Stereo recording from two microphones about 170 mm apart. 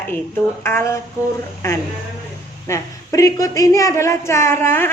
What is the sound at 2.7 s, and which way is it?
Speech, 20° left (ahead or behind).